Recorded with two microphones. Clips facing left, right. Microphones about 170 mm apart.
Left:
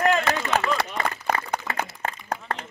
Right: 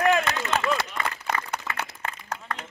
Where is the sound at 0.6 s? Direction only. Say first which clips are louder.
Left 2 dB; 35° left (ahead or behind).